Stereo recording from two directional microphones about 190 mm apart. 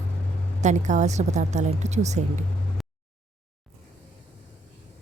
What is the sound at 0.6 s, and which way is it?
Speech, 40° right (ahead or behind).